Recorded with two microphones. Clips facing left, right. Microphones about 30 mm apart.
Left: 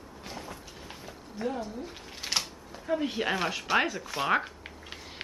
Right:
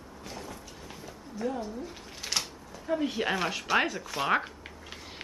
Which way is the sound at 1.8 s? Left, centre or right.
Centre.